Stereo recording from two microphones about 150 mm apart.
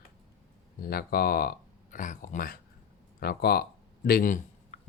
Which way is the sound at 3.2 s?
90° left.